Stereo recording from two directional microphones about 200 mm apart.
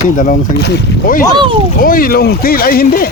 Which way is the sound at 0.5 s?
55° left (ahead or behind).